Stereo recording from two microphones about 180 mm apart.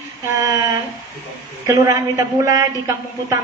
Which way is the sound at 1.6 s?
15° right (ahead or behind).